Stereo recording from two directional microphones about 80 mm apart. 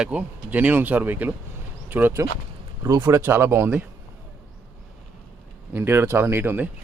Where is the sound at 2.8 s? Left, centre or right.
Right.